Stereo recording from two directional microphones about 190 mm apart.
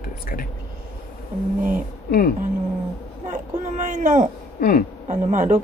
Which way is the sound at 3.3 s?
40° right (ahead or behind).